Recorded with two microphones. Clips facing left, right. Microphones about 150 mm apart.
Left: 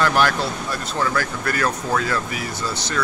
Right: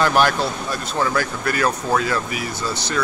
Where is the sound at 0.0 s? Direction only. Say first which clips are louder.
Right 2 dB; 20° right (ahead or behind).